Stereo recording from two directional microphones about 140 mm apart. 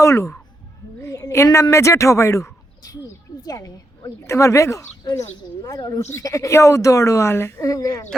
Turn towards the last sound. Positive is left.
turn(degrees=25)  # may be behind; listen again after turning